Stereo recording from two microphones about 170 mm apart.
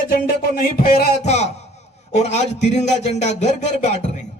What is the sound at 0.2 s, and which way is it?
Music, 60° left (ahead or behind).